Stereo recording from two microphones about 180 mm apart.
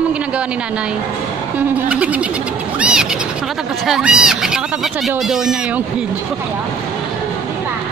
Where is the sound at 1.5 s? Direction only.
5° right (ahead or behind).